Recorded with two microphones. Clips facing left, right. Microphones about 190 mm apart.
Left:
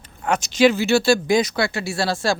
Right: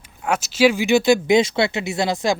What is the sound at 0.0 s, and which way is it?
Speech, 5° right (ahead or behind).